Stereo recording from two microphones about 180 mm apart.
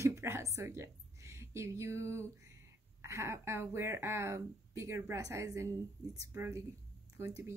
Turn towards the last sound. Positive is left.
turn(degrees=-15)  # may be behind; listen again after turning